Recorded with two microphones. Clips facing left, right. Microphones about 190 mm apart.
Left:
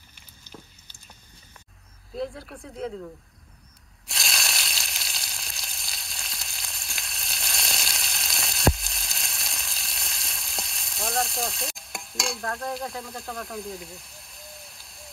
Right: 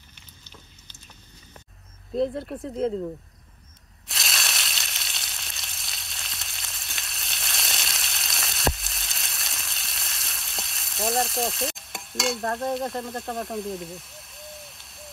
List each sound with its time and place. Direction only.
2.1 s speech: centre (ahead or behind)
4.1 s frying: centre (ahead or behind)